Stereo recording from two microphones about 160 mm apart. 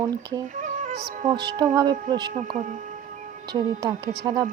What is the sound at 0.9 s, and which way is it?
Speech, 90° right.